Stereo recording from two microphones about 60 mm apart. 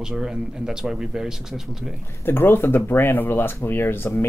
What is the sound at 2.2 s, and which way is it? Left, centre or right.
Speech, left.